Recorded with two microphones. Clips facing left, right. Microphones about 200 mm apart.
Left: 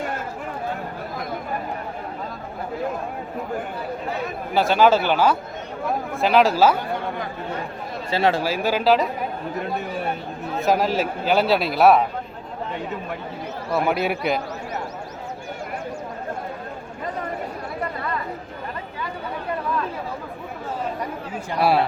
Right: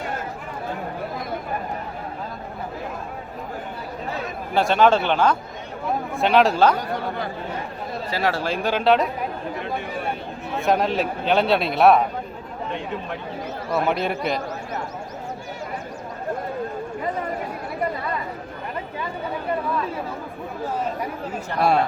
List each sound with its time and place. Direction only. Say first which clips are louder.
4.5 s a man's voice: even; centre (ahead or behind)
8.1 s speech: left 4 dB; 25° left (ahead or behind)
8.4 s a man's voice: even; 5° left (ahead or behind)
10.6 s a man's voice: even; centre (ahead or behind)
13.7 s a man's voice: left 1 dB; 5° left (ahead or behind)
21.5 s a man's voice: left 1 dB; 5° left (ahead or behind)